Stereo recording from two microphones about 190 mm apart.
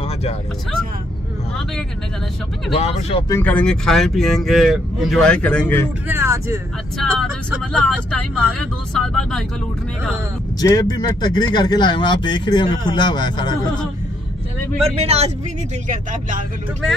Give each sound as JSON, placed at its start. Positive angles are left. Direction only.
{"t": 0.0, "sound": "vehicle", "side_deg": 35}
{"t": 2.7, "sound": "speech", "side_deg": 30}
{"t": 3.3, "sound": "speech", "side_deg": 10}
{"t": 6.0, "sound": "speech", "side_deg": -15}
{"t": 7.0, "sound": "speech", "side_deg": 0}
{"t": 10.6, "sound": "speech", "side_deg": 20}
{"t": 14.8, "sound": "speech", "side_deg": -30}
{"t": 15.9, "sound": "speech", "side_deg": -45}